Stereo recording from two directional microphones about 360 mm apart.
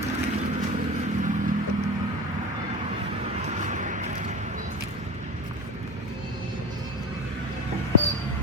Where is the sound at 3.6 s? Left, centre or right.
Centre.